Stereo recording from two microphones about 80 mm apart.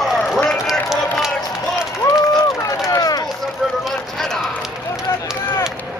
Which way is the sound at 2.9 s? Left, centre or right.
Left.